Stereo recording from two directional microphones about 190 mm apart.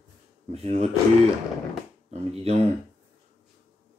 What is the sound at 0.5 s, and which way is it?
Speech, 35° right (ahead or behind).